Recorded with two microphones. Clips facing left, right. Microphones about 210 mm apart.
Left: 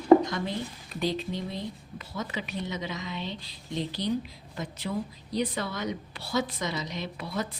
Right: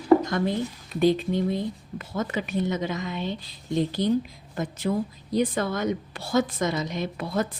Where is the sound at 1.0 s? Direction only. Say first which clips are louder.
Right 9 dB; 50° right (ahead or behind).